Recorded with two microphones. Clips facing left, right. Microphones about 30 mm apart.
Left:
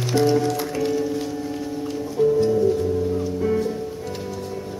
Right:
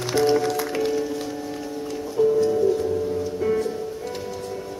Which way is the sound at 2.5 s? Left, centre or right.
Centre.